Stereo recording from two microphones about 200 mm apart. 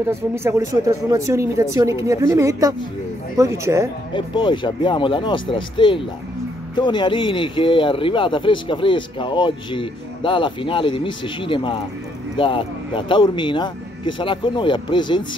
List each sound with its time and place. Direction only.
0.1 s speech: 10° right (ahead or behind)
4.1 s speech: 25° left (ahead or behind)